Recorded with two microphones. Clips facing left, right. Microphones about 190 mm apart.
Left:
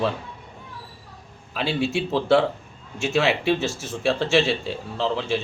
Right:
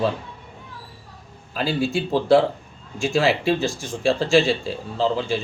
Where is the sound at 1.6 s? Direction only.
70° left (ahead or behind).